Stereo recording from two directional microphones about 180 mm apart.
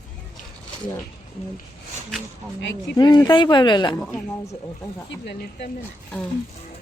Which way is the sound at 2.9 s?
25° left (ahead or behind).